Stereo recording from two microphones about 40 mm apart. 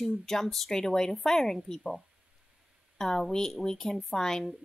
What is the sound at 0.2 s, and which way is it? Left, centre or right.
A woman's voice, centre.